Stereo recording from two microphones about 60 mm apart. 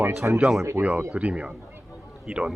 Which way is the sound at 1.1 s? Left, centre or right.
Right.